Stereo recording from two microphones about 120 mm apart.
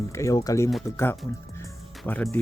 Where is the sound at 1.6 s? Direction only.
15° left (ahead or behind).